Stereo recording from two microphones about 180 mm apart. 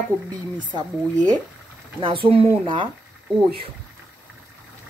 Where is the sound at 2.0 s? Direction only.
30° right (ahead or behind).